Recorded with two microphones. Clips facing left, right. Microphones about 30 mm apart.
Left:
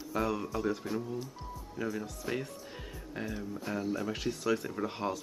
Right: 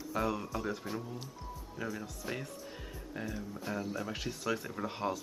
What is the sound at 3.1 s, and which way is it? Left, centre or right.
Speech, left.